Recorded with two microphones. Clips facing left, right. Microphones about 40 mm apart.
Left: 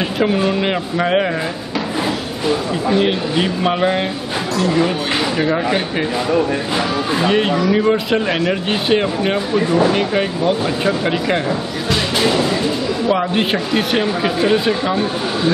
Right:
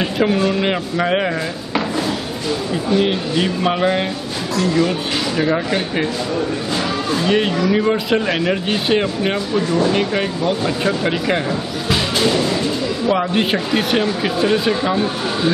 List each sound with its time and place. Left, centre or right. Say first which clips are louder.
0.6 s speech: even; centre
2.9 s speech: left 1 dB; centre
7.1 s speech: even; centre
7.3 s speech: even; centre
9.9 s speech: left 1 dB; centre